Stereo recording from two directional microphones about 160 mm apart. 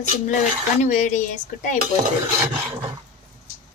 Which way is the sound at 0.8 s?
50° left (ahead or behind).